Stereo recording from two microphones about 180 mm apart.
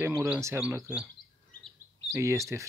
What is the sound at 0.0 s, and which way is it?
Speech, 15° right (ahead or behind).